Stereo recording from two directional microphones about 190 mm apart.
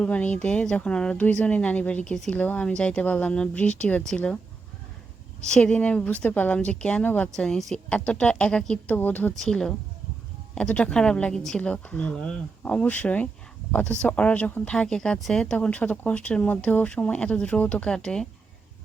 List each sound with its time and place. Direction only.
0.0 s speech: 5° left (ahead or behind)
5.5 s speech: 5° left (ahead or behind)